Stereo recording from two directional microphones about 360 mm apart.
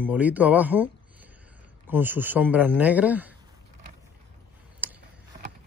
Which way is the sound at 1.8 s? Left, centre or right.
Centre.